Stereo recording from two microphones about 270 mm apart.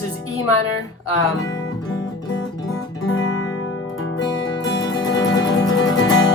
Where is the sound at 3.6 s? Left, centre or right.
Left.